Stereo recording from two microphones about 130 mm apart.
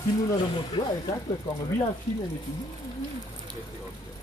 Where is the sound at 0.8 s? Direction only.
30° left (ahead or behind).